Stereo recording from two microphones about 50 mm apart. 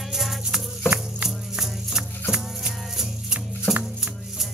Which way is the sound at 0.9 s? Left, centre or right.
Centre.